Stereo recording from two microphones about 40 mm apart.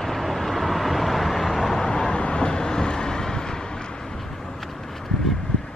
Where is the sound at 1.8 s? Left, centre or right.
Left.